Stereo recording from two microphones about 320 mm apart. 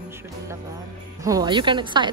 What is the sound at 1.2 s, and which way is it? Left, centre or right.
Speech, centre.